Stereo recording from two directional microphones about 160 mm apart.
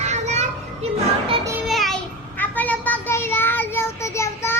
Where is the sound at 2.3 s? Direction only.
10° left (ahead or behind).